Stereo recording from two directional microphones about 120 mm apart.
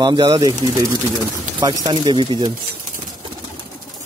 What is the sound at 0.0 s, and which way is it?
Speech, 35° right (ahead or behind).